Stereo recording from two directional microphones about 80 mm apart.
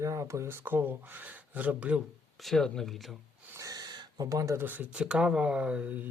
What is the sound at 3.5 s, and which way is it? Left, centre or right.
Gasp, right.